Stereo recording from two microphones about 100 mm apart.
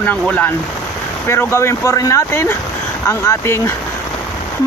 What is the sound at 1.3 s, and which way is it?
Speech, 25° left (ahead or behind).